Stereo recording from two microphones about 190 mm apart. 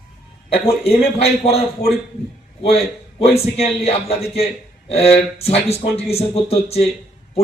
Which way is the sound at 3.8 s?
35° left (ahead or behind).